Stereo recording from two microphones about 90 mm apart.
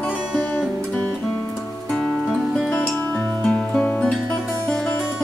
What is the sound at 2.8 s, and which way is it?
Music, 20° left (ahead or behind).